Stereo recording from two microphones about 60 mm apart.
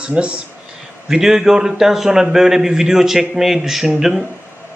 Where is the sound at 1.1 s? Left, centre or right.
Centre.